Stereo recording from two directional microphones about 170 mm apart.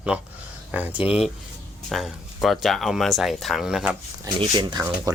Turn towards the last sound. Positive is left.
turn(degrees=-25)  # may be behind; listen again after turning